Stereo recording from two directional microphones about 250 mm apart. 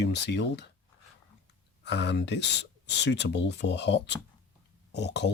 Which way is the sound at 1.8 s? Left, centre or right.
Left.